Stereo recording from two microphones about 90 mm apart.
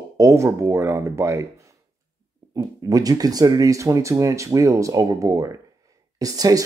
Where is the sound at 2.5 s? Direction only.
40° right (ahead or behind).